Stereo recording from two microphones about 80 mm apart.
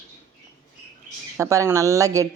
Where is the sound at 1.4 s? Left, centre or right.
Right.